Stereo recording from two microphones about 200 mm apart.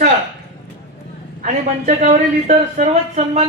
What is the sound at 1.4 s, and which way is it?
A woman's voice, 40° right (ahead or behind).